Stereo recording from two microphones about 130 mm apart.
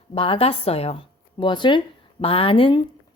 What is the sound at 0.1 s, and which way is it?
Speech, 45° left (ahead or behind).